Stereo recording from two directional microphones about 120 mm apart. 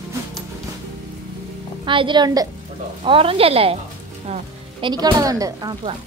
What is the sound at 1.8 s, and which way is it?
Speech, 45° right (ahead or behind).